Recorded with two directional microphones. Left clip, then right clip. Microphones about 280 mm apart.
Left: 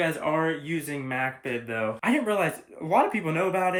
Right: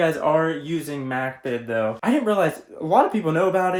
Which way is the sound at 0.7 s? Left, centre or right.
Centre.